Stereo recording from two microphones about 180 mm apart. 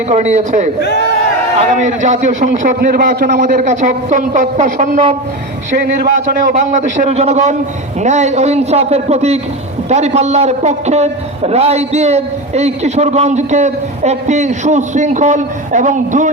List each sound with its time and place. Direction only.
0.1 s a man's voice: 40° right (ahead or behind)
0.8 s speech: 70° left (ahead or behind)
1.7 s a woman's voice: 40° right (ahead or behind)
5.7 s a man's voice: 60° right (ahead or behind)
6.5 s a man's voice: 45° right (ahead or behind)